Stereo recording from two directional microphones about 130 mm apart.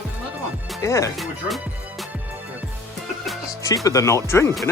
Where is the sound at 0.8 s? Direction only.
25° left (ahead or behind).